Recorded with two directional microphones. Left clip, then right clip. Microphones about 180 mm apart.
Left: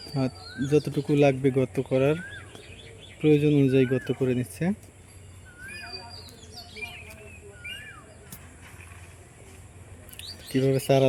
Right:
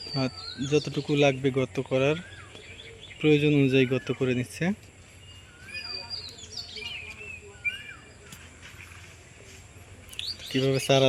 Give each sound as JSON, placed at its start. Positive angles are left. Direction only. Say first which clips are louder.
{"t": 0.1, "sound": "speech", "louder": "even", "side_deg": 10}
{"t": 3.2, "sound": "speech", "louder": "left 1 dB", "side_deg": 0}
{"t": 6.5, "sound": "chirp", "louder": "right 2 dB", "side_deg": 70}
{"t": 10.2, "sound": "chirp", "louder": "right 7 dB", "side_deg": 5}
{"t": 10.5, "sound": "speech", "louder": "left 1 dB", "side_deg": 5}